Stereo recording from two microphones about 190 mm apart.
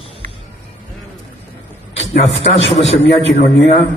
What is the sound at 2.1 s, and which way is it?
A man's voice, 35° left (ahead or behind).